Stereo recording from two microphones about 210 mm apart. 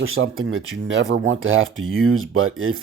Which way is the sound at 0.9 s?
60° right (ahead or behind).